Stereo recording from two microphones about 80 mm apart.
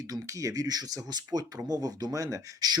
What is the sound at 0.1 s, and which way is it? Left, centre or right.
Speech, right.